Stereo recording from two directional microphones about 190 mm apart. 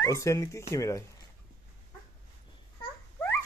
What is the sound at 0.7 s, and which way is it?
Speech, 15° left (ahead or behind).